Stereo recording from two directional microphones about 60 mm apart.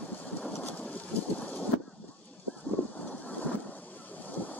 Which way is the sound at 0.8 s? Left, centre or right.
Left.